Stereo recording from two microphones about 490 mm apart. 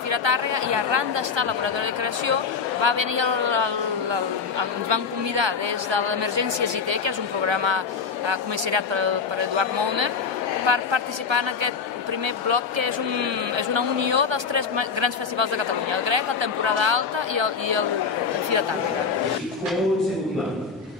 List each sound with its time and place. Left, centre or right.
0.1 s a woman's voice: right